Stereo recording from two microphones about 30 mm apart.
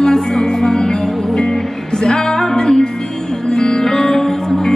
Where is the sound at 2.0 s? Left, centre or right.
Centre.